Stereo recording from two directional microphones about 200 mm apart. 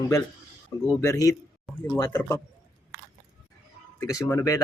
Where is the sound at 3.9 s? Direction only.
15° left (ahead or behind).